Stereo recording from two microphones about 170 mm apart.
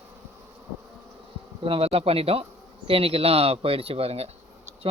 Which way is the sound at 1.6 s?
35° right (ahead or behind).